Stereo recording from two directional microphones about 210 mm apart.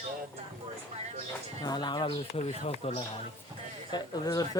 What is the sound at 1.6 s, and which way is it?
Speech, 20° left (ahead or behind).